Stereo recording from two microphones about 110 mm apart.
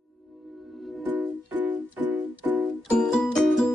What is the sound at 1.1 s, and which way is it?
Music, 15° right (ahead or behind).